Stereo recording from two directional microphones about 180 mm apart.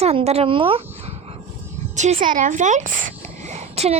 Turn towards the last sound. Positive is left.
turn(degrees=-35)  # may be behind; listen again after turning